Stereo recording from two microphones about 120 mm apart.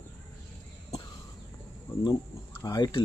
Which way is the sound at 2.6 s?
35° left (ahead or behind).